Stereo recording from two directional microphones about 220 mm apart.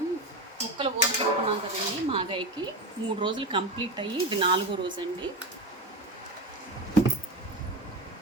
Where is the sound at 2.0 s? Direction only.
25° right (ahead or behind).